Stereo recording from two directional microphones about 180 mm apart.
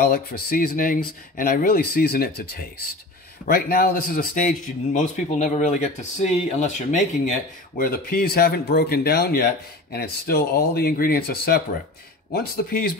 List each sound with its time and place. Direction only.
0.0 s speech: 55° left (ahead or behind)
3.4 s speech: 60° left (ahead or behind)